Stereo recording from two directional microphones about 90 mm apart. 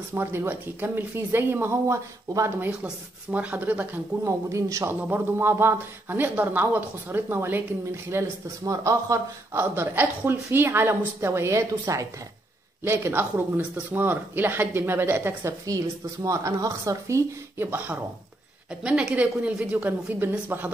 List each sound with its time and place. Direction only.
0.1 s speech: 25° right (ahead or behind)
2.8 s a woman's voice: 15° right (ahead or behind)
4.2 s speech: 35° right (ahead or behind)
11.8 s speech: 40° right (ahead or behind)
12.8 s speech: 25° right (ahead or behind)
15.6 s speech: 40° right (ahead or behind)
17.6 s speech: 25° right (ahead or behind)
18.8 s a woman's voice: 10° right (ahead or behind)